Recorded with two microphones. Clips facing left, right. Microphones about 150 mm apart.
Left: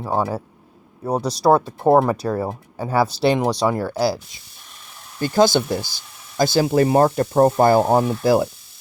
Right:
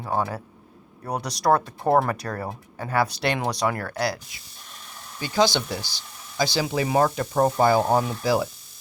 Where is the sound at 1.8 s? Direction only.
15° left (ahead or behind).